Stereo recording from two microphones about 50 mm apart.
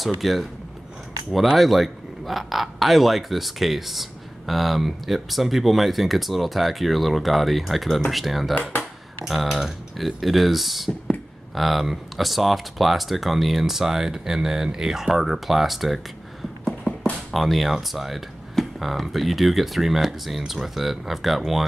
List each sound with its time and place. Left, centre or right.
0.2 s a man's voice: centre
17.3 s a man's voice: centre